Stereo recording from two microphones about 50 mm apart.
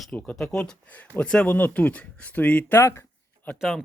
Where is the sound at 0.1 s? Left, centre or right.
Left.